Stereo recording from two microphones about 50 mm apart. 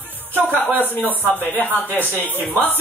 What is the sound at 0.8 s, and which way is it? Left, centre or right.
Speech, left.